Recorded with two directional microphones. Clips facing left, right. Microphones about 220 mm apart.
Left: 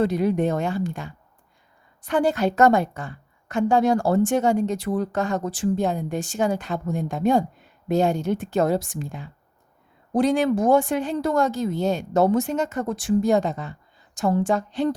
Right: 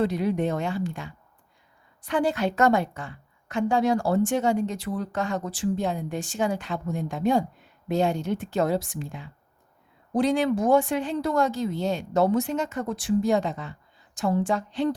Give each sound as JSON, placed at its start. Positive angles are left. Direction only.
{"t": 0.0, "sound": "a woman's voice", "side_deg": 45}